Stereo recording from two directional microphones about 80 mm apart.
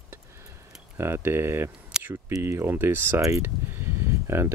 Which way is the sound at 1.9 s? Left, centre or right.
Centre.